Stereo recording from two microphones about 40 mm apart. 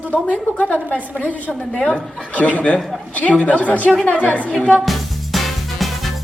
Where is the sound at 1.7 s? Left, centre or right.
Centre.